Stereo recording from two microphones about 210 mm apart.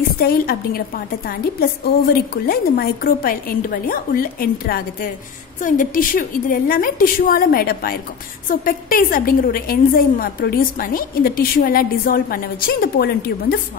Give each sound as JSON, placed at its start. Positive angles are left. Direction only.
{"t": 0.2, "sound": "a woman's voice", "side_deg": 45}